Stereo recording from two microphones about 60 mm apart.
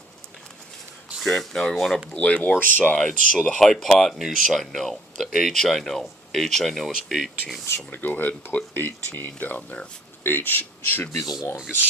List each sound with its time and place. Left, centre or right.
1.2 s speech: centre
2.1 s speech: left
3.1 s speech: centre
7.9 s speech: left
11.2 s speech: centre